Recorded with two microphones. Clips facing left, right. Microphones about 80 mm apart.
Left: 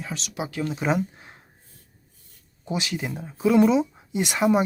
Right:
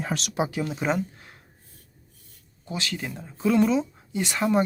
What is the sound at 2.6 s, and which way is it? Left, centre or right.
Speech, centre.